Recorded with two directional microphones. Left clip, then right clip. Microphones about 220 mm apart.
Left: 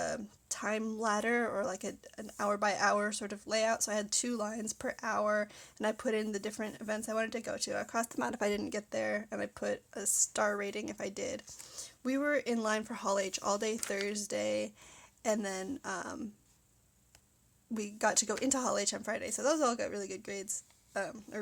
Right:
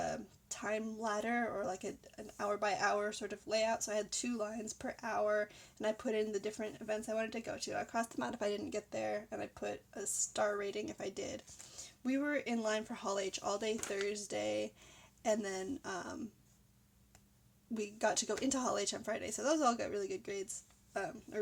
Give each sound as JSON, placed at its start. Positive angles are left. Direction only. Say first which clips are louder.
{"t": 0.0, "sound": "a woman's voice", "louder": "left 3 dB", "side_deg": 20}
{"t": 17.7, "sound": "a woman's voice", "louder": "left 3 dB", "side_deg": 15}